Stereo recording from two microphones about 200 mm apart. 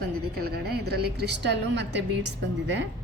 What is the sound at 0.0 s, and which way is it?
A woman's voice, 50° right (ahead or behind).